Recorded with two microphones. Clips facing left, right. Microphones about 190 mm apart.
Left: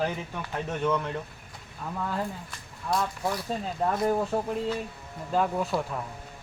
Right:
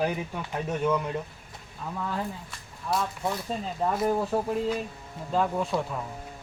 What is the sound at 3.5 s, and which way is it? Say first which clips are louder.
Speech: even; centre (ahead or behind).